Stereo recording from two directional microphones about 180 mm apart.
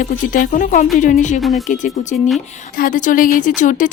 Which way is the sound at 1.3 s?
Centre (ahead or behind).